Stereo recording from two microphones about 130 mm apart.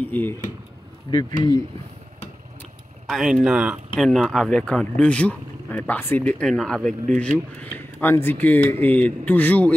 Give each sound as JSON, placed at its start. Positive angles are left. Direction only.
{"t": 0.0, "sound": "speech", "side_deg": 15}
{"t": 1.1, "sound": "speech", "side_deg": 35}
{"t": 3.1, "sound": "speech", "side_deg": 0}
{"t": 3.9, "sound": "speech", "side_deg": 5}
{"t": 7.7, "sound": "speech", "side_deg": 15}